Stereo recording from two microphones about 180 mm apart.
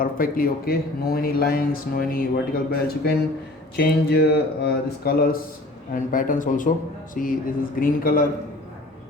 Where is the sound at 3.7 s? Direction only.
65° left (ahead or behind).